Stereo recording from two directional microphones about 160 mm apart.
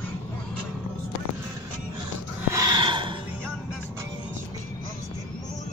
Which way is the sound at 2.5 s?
25° right (ahead or behind).